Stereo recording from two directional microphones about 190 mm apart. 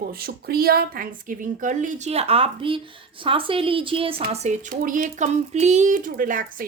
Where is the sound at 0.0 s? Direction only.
50° right (ahead or behind).